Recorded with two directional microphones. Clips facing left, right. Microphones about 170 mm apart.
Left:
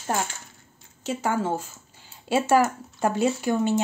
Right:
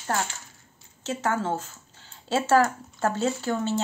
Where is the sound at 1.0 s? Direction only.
10° left (ahead or behind).